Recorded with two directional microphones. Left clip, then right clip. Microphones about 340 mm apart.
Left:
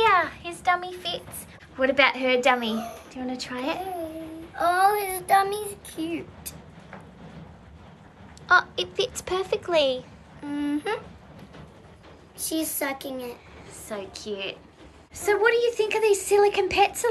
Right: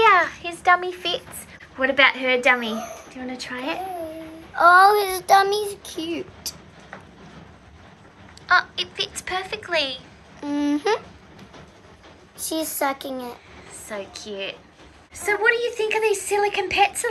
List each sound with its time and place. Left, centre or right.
0.0 s a sound: centre
1.8 s a woman's voice: centre
4.6 s child singing: centre
8.5 s a woman's voice: centre
10.4 s a sound: right
12.4 s child singing: centre
13.8 s a woman's voice: centre